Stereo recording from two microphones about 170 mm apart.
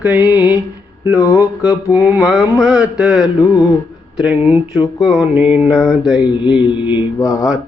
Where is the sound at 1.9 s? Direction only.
5° right (ahead or behind).